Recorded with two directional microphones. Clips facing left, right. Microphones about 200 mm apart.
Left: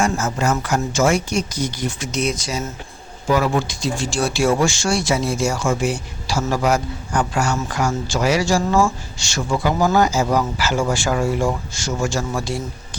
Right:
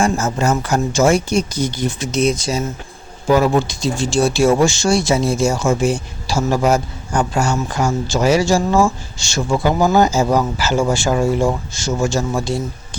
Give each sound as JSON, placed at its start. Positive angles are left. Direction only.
{"t": 0.0, "sound": "speech", "side_deg": -30}